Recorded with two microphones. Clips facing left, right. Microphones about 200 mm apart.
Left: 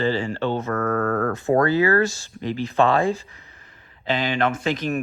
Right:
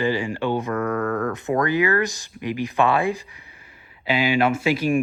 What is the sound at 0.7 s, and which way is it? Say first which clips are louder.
Speech: left 1 dB; 45° left (ahead or behind).